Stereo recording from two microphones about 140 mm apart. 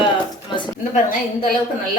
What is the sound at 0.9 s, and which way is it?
Speech, 85° left.